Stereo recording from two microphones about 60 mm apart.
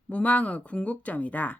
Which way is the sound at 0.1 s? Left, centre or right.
Left.